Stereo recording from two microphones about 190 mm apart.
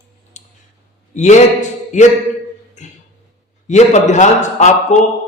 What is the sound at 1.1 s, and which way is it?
Speech, 40° left (ahead or behind).